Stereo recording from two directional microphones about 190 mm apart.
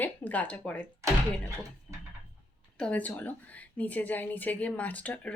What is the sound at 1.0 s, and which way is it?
Speech, 15° right (ahead or behind).